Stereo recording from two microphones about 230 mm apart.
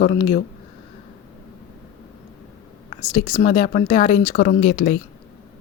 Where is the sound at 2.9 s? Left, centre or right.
Left.